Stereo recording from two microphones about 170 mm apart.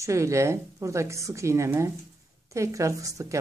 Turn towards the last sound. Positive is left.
turn(degrees=-20)  # may be behind; listen again after turning